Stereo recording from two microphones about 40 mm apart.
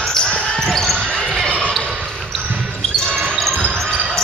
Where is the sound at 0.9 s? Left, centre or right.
Centre.